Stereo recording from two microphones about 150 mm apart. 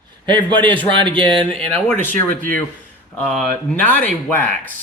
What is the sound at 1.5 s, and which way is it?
Speech, 10° left (ahead or behind).